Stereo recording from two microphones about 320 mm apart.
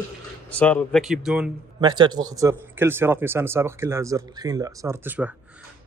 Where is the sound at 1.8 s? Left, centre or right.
Centre.